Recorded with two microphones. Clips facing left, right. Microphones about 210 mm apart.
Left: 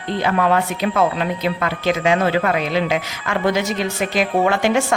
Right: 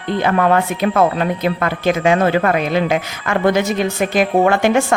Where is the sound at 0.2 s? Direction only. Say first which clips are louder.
Right 3 dB; 50° right (ahead or behind).